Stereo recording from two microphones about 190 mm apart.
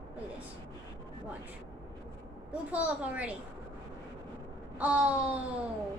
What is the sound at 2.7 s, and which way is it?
Speech, 5° right (ahead or behind).